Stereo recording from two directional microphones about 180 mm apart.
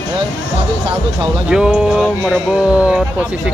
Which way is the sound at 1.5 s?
5° right (ahead or behind).